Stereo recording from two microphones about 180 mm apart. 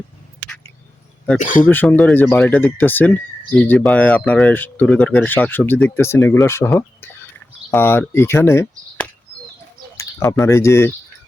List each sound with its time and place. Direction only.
1.4 s speech: 45° left (ahead or behind)
1.6 s speech: 10° left (ahead or behind)
10.4 s speech: 15° left (ahead or behind)